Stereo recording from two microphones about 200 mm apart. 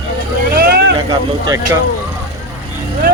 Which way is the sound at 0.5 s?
50° right (ahead or behind).